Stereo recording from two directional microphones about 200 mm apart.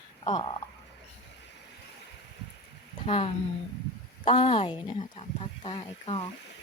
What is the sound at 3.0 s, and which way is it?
Speech, 25° left (ahead or behind).